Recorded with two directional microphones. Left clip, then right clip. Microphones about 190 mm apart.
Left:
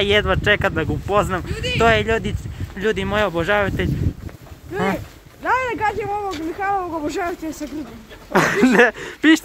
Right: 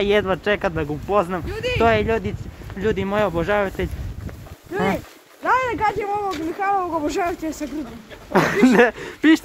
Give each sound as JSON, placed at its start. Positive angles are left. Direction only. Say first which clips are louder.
{"t": 0.0, "sound": "speech", "louder": "left 2 dB", "side_deg": -5}
{"t": 1.5, "sound": "speech", "louder": "even", "side_deg": -35}
{"t": 1.8, "sound": "speech", "louder": "left 2 dB", "side_deg": 0}
{"t": 4.7, "sound": "speech", "louder": "even", "side_deg": -10}
{"t": 6.9, "sound": "speech", "louder": "right 1 dB", "side_deg": -20}
{"t": 8.3, "sound": "speech", "louder": "left 1 dB", "side_deg": -5}